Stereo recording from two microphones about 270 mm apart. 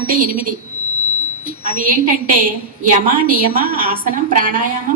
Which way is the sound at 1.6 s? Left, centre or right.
Right.